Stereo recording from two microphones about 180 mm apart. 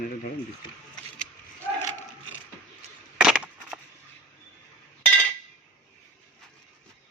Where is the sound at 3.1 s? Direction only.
5° right (ahead or behind).